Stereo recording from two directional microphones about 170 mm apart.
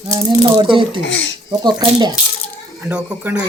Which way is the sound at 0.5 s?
30° right (ahead or behind).